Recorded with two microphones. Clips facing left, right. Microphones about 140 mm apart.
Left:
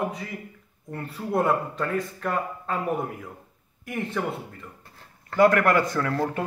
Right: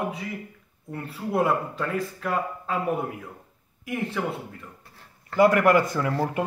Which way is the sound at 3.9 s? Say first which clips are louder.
Even; centre (ahead or behind).